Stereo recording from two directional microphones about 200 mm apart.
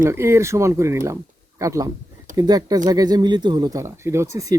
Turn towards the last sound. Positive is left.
turn(degrees=-15)  # may be behind; listen again after turning